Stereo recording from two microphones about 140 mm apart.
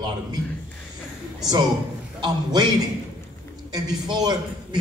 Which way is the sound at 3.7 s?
30° right (ahead or behind).